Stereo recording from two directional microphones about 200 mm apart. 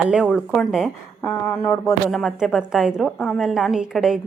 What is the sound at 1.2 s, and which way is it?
Speech, 10° left (ahead or behind).